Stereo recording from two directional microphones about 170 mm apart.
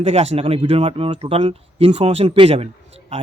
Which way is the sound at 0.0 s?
35° right (ahead or behind).